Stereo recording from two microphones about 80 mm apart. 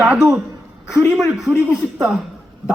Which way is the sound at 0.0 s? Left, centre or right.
Centre.